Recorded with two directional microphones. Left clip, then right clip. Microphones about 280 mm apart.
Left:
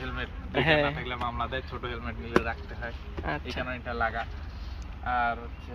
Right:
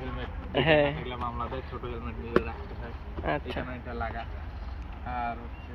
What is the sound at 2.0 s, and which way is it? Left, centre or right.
Speech, left.